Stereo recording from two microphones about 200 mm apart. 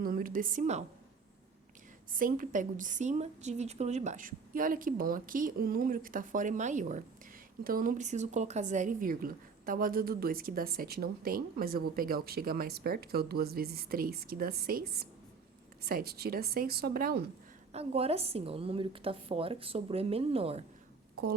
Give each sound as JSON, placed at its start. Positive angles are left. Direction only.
{"t": 0.0, "sound": "a woman's voice", "side_deg": -45}
{"t": 2.1, "sound": "a woman's voice", "side_deg": -45}
{"t": 17.7, "sound": "a woman's voice", "side_deg": -30}